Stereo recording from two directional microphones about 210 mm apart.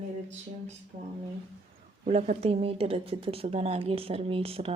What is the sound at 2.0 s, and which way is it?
Speech, 35° right (ahead or behind).